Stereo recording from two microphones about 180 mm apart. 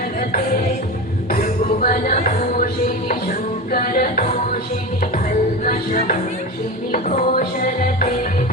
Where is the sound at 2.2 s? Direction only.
50° left (ahead or behind).